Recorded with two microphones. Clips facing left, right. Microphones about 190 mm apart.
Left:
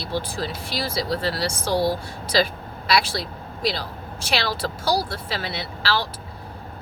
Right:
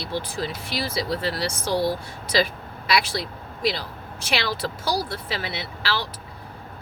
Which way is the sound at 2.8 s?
15° right (ahead or behind).